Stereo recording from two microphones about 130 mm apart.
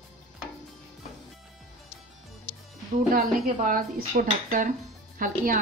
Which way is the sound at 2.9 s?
90° right.